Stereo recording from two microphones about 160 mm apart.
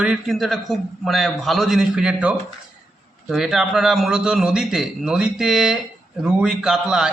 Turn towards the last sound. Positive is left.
turn(degrees=-5)  # may be behind; listen again after turning